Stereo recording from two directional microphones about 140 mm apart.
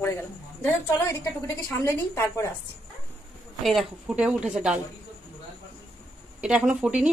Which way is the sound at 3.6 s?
5° right (ahead or behind).